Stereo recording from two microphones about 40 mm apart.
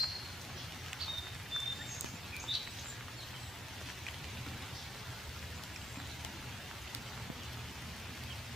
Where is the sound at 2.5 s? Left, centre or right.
Centre.